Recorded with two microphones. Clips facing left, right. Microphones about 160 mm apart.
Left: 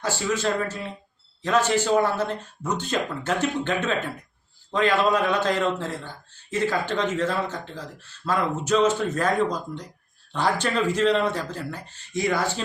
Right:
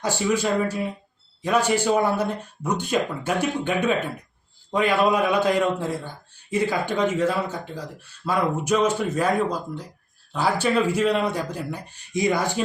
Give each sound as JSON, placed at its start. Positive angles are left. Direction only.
{"t": 0.0, "sound": "speech", "side_deg": -15}